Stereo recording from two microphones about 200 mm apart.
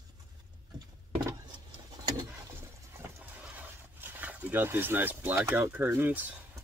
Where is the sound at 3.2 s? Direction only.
10° right (ahead or behind).